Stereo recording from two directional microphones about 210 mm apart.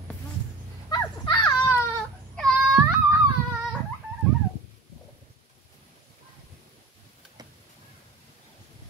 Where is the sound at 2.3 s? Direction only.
Centre (ahead or behind).